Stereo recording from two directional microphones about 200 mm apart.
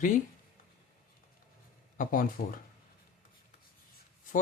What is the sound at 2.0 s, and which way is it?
Speech, 45° left (ahead or behind).